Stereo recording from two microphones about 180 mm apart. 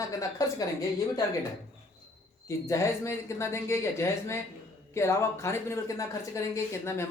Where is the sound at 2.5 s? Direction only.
15° left (ahead or behind).